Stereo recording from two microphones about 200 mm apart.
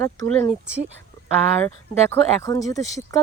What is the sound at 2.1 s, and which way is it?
Speech, 15° left (ahead or behind).